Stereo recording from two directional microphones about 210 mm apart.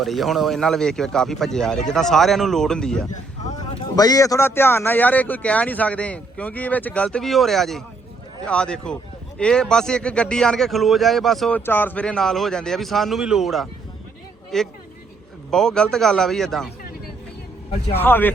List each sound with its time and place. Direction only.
0.0 s speech: centre (ahead or behind)
3.6 s speech: 20° left (ahead or behind); by 16.7 s centre (ahead or behind)
17.9 s speech: 10° left (ahead or behind)